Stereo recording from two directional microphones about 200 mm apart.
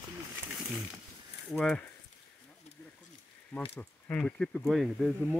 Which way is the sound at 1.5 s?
5° left (ahead or behind).